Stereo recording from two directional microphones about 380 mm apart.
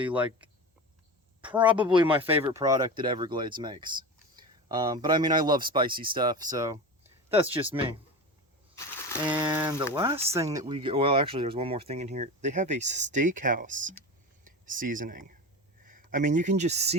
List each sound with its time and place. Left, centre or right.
0.0 s speech: centre
9.2 s speech: centre